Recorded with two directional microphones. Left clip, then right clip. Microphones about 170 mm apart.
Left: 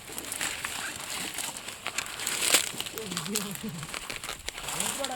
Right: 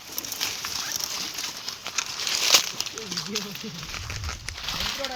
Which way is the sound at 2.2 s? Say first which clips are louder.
Right 6 dB; 90° left.